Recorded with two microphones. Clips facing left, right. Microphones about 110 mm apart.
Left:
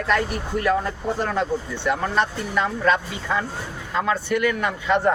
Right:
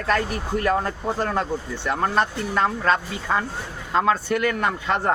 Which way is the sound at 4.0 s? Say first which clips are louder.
Right 2 dB; 40° right (ahead or behind).